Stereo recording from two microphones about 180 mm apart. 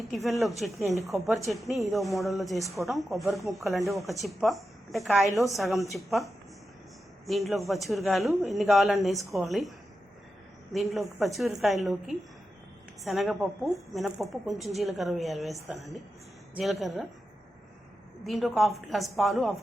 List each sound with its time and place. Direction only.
0.1 s speech: centre (ahead or behind)
18.2 s speech: centre (ahead or behind)